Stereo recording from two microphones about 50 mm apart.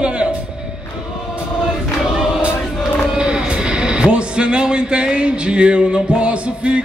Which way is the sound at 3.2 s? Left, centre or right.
Centre.